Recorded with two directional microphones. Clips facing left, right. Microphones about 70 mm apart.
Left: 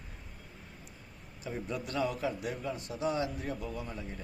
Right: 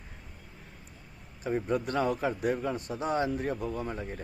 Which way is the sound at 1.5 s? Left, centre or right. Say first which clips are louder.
Right 8 dB; right.